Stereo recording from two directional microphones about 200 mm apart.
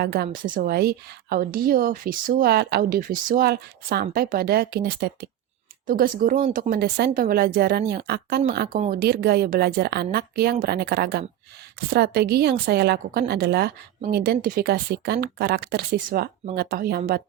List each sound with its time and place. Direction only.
0.0 s a woman's voice: 50° right (ahead or behind)